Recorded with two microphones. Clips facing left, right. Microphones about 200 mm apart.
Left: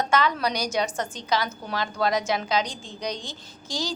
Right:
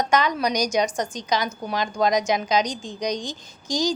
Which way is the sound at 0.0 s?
15° right (ahead or behind).